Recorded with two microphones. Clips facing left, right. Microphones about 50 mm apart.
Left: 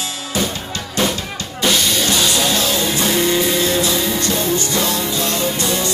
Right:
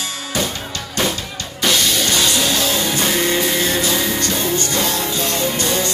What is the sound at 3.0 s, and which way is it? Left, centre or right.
Music, right.